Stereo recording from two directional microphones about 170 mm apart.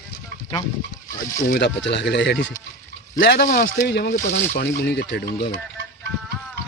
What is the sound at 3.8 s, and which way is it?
Speech, 70° left (ahead or behind).